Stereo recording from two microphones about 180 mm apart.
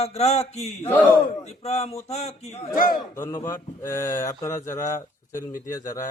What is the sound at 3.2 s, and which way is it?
Speech, 15° left (ahead or behind).